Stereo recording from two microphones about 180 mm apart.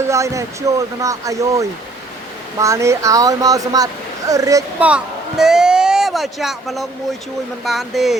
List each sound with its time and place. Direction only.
0.0 s speech: 15° right (ahead or behind)
4.8 s speech: 5° right (ahead or behind)